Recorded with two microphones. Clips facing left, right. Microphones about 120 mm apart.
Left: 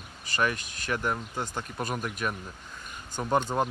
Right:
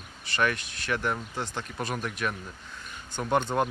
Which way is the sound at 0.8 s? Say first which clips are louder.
Even; 10° left (ahead or behind).